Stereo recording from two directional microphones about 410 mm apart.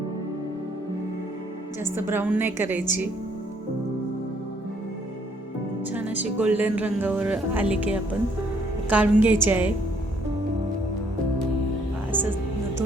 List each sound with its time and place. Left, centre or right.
1.8 s speech: centre
5.8 s speech: centre
12.1 s speech: centre